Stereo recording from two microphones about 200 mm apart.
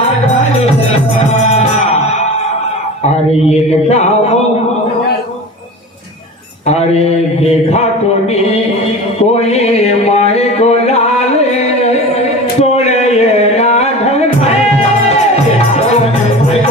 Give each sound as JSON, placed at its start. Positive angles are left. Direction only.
{"t": 3.1, "sound": "speech", "side_deg": 30}
{"t": 9.2, "sound": "a sound", "side_deg": 30}
{"t": 12.7, "sound": "music", "side_deg": 30}